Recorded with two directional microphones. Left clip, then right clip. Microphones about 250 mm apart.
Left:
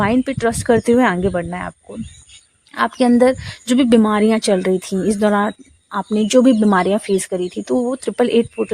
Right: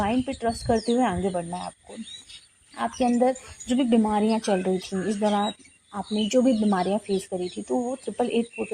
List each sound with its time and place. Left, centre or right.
0.0 s a woman's voice: left